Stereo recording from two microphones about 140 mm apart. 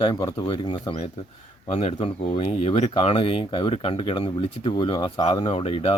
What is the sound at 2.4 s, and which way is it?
Speech, 50° left (ahead or behind).